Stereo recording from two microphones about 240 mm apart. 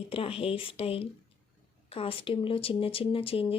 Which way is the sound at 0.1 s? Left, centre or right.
Left.